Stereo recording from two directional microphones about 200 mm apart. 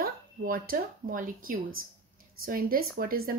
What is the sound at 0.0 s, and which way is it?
Speech, 50° right (ahead or behind).